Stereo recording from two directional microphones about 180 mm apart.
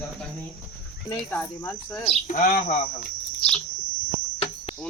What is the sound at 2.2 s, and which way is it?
Speech, 50° left (ahead or behind).